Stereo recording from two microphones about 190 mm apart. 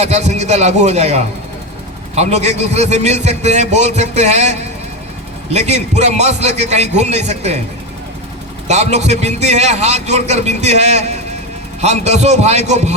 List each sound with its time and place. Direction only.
0.0 s a man's voice: 35° right (ahead or behind)
8.6 s a man's voice: 35° right (ahead or behind)